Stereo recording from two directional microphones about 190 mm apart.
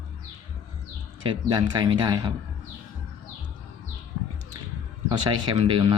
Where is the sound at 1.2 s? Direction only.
20° right (ahead or behind).